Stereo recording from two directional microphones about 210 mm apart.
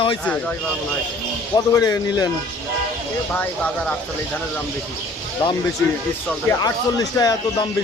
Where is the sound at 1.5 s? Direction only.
15° left (ahead or behind).